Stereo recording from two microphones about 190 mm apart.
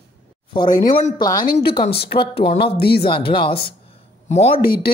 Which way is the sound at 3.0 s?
25° left (ahead or behind).